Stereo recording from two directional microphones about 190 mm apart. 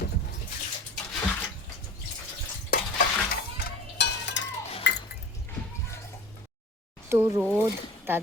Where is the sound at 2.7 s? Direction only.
50° left (ahead or behind).